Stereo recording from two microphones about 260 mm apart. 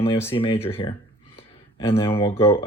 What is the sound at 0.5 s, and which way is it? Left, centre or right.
Speech, centre.